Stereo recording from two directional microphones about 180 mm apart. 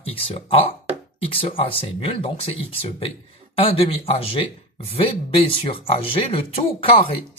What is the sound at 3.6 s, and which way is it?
Speech, 30° left (ahead or behind).